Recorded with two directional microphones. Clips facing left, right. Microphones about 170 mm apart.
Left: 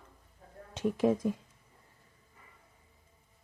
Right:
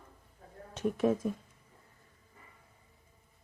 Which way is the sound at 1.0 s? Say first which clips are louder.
Left 1 dB; 10° left (ahead or behind).